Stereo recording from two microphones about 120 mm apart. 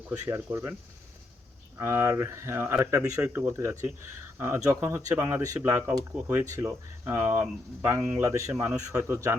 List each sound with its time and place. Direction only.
0.3 s speech: 25° right (ahead or behind)
1.8 s speech: 25° right (ahead or behind)